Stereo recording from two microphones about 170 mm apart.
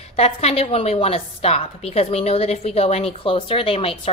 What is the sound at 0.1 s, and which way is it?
A woman's voice, 40° left (ahead or behind).